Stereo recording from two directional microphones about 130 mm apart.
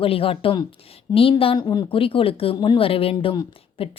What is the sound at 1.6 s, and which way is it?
Speech, 35° left (ahead or behind).